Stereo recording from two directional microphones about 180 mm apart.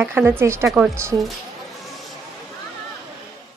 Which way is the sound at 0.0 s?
10° right (ahead or behind).